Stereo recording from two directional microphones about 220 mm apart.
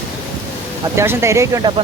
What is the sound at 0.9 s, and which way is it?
Speech, 10° right (ahead or behind).